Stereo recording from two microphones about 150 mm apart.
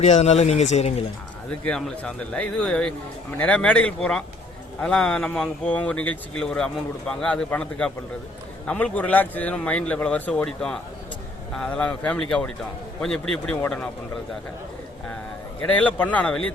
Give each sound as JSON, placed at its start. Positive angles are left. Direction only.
{"t": 0.0, "sound": "speech", "side_deg": 45}
{"t": 1.5, "sound": "a man's voice", "side_deg": 5}
{"t": 15.7, "sound": "a man's voice", "side_deg": 10}